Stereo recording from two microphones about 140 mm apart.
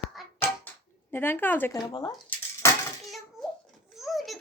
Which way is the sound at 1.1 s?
15° left (ahead or behind).